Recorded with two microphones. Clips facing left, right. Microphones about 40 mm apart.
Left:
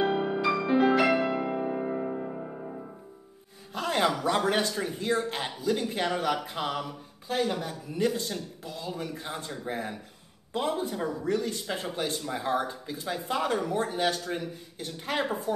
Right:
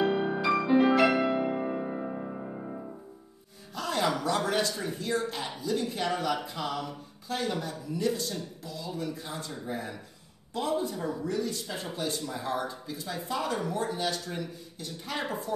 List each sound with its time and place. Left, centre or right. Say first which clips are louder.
0.2 s music: even; centre
3.7 s a sound: left 2 dB; left
4.5 s a man's voice: left 2 dB; left
7.2 s speech: left 3 dB; left
7.6 s a man's voice: left 2 dB; left